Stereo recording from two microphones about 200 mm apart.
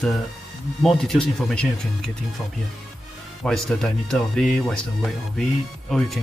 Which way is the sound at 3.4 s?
Centre (ahead or behind).